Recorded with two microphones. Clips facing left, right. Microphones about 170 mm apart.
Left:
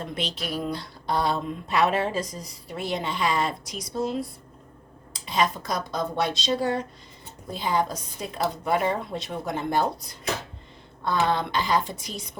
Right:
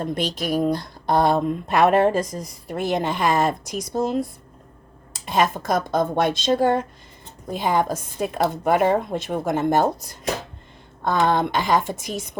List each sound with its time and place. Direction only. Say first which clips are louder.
0.0 s speech: right 7 dB; 45° right (ahead or behind)